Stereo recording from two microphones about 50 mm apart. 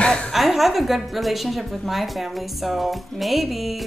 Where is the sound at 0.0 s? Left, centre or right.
Left.